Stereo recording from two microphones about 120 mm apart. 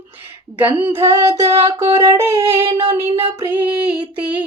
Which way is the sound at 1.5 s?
55° right (ahead or behind).